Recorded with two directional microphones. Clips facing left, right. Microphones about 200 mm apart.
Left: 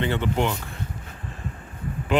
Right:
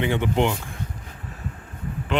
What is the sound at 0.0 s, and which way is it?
Speech, 15° right (ahead or behind).